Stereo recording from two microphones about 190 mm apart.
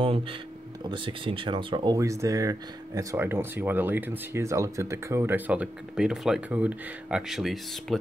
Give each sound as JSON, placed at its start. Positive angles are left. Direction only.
{"t": 0.0, "sound": "speech", "side_deg": -30}